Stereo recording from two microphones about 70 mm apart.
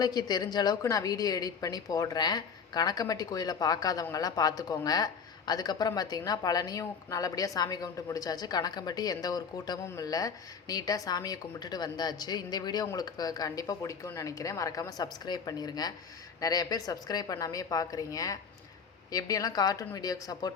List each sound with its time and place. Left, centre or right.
0.0 s speech: left
0.8 s a woman's voice: left